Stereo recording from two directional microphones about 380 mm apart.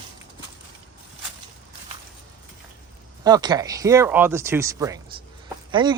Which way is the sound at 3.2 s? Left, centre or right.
Centre.